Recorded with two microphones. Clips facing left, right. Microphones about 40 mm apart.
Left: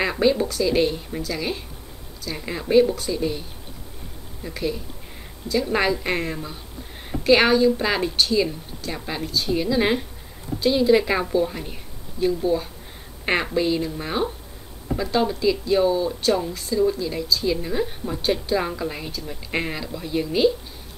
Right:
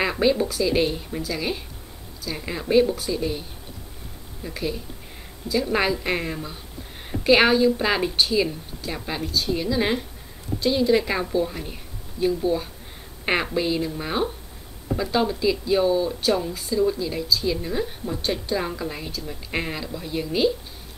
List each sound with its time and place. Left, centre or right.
0.0 s speech: centre